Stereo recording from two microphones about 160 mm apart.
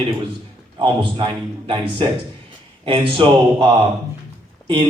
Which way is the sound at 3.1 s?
35° right (ahead or behind).